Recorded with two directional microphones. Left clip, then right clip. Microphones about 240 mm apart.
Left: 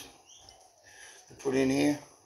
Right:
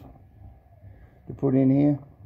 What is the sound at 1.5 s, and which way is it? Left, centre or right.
Speech, centre.